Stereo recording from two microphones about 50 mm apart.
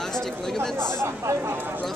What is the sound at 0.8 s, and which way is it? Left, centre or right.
Speech, right.